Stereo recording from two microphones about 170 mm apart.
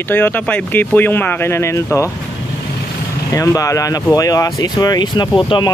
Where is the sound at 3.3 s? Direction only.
20° left (ahead or behind).